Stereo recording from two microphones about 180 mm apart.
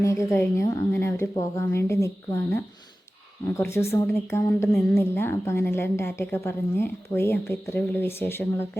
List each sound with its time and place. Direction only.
0.0 s a woman's voice: 15° left (ahead or behind)
3.6 s a woman's voice: 15° left (ahead or behind)